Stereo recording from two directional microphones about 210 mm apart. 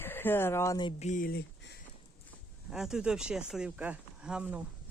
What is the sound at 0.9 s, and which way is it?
Speech, 35° left (ahead or behind).